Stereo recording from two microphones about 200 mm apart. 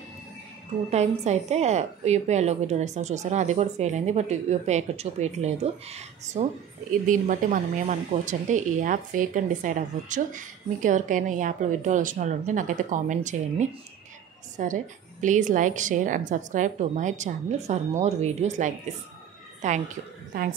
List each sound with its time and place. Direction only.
0.8 s a woman's voice: 35° right (ahead or behind)